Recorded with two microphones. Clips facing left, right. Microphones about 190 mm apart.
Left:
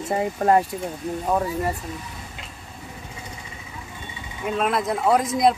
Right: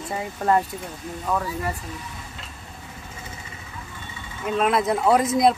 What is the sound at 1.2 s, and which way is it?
Speech, 30° left (ahead or behind).